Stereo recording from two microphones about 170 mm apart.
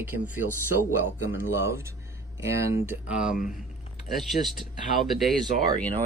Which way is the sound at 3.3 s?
55° left (ahead or behind).